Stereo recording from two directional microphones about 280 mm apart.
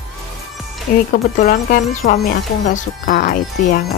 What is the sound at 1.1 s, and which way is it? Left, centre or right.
Speech, left.